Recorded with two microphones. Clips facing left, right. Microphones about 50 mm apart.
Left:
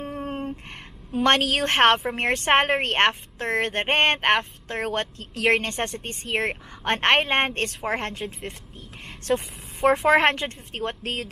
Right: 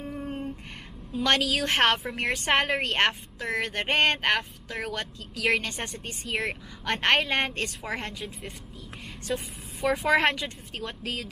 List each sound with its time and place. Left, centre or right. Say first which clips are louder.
0.1 s a sound: left 2 dB; left
1.1 s speech: left 4 dB; left
9.3 s speech: left 7 dB; left